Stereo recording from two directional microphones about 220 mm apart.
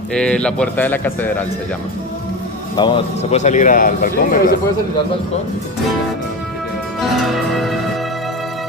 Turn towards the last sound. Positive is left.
turn(degrees=0)  # may be behind; listen again after turning